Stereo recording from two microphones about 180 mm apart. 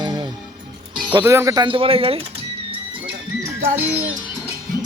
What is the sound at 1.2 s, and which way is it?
Speech, 15° right (ahead or behind).